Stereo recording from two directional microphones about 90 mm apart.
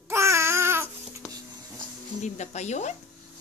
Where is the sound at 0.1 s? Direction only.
30° right (ahead or behind).